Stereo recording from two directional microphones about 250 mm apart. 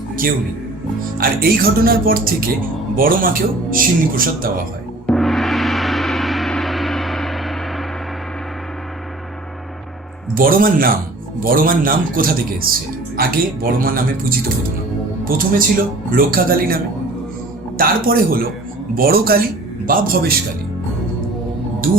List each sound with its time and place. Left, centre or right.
1.2 s speech: right
5.0 s gong: centre
10.3 s speech: right
17.7 s speech: right